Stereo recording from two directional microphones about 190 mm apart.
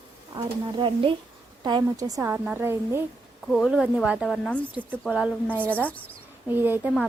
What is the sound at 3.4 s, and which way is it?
A woman's voice, centre (ahead or behind).